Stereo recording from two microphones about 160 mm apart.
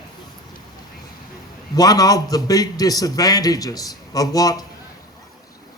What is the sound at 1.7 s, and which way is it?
A man's voice, 25° left (ahead or behind).